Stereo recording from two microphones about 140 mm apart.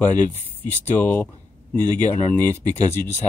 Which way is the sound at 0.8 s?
15° left (ahead or behind).